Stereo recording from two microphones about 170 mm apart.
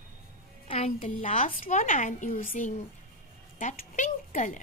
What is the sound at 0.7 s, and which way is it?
Speech, 40° left (ahead or behind).